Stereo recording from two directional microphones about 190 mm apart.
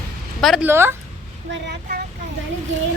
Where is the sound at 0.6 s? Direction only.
10° right (ahead or behind).